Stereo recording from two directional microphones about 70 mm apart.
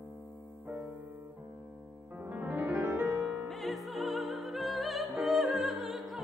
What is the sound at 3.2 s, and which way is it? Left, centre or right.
Music, centre.